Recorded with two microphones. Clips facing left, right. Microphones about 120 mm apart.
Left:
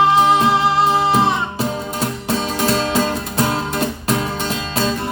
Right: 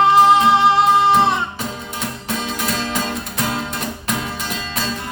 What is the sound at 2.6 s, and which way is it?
Music, 30° left (ahead or behind).